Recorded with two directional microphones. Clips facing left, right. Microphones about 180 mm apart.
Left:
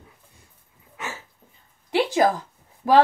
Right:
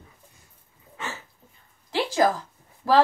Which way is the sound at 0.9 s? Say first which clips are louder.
Left 1 dB; 10° left (ahead or behind).